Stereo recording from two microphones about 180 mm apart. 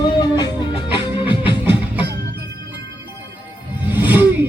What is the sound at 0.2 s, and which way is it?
Music, 20° left (ahead or behind).